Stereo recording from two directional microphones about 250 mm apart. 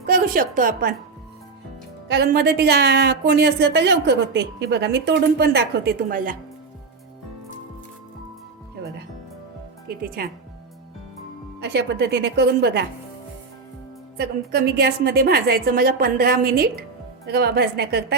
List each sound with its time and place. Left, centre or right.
0.0 s speech: right
2.0 s speech: right
11.6 s speech: right
14.2 s speech: right